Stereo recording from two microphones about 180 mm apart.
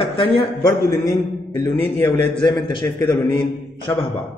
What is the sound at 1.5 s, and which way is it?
Speech, 15° left (ahead or behind).